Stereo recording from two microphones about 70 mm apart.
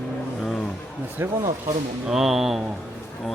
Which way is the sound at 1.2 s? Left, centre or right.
Right.